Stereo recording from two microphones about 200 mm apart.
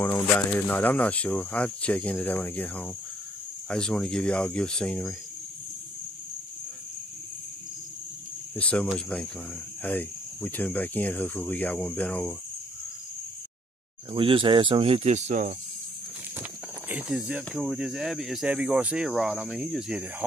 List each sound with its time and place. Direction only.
0.0 s speech: 10° left (ahead or behind)
8.5 s speech: 5° left (ahead or behind)
14.1 s speech: 25° right (ahead or behind)
16.9 s speech: 5° right (ahead or behind)